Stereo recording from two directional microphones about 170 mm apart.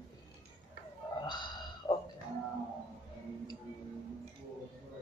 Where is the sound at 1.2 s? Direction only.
25° left (ahead or behind).